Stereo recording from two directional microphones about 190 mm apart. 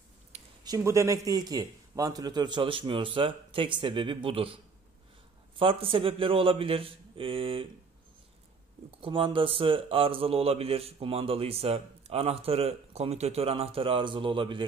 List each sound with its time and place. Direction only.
0.3 s a sound: 35° right (ahead or behind)
0.7 s a man's voice: 15° right (ahead or behind)
5.6 s a man's voice: 30° right (ahead or behind)
9.0 s a man's voice: 25° right (ahead or behind)